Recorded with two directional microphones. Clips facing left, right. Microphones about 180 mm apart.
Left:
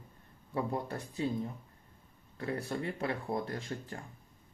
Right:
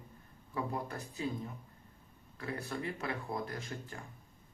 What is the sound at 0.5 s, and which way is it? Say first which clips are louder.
Speech: left 3 dB; 30° left (ahead or behind).